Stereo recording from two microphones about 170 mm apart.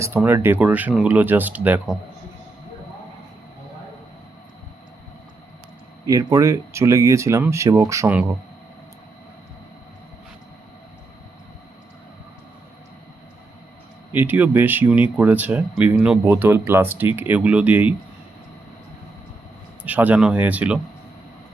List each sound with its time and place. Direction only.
0.0 s speech: 10° right (ahead or behind)
6.1 s speech: 20° right (ahead or behind)
14.1 s speech: 10° right (ahead or behind)
19.8 s speech: 10° right (ahead or behind)